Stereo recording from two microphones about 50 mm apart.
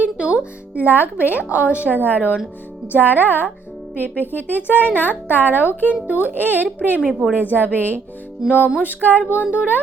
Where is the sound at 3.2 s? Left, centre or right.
Left.